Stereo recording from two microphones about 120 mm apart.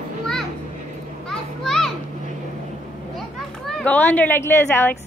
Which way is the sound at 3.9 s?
15° left (ahead or behind).